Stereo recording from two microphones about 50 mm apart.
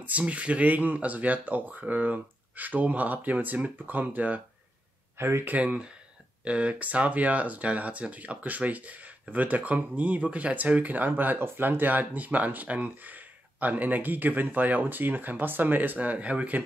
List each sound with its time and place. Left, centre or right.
0.0 s speech: right
5.1 s speech: right
5.6 s speech: right